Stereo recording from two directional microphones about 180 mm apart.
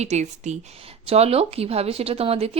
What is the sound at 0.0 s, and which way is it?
A woman's voice, 40° right (ahead or behind).